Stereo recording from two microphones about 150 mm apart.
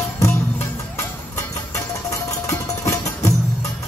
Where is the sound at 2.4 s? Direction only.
20° left (ahead or behind).